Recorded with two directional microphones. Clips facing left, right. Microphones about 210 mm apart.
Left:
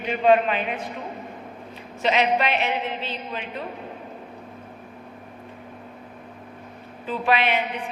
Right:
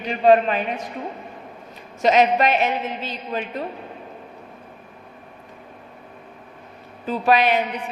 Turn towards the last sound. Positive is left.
turn(degrees=-40)  # may be behind; listen again after turning